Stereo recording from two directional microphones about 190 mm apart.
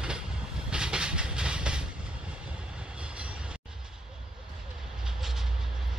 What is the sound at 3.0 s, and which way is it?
Train, 5° right (ahead or behind).